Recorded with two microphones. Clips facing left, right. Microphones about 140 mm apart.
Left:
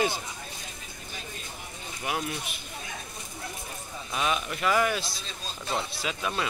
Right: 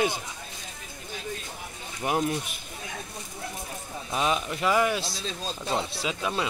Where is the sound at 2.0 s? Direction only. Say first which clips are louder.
Right 6 dB; 40° right (ahead or behind).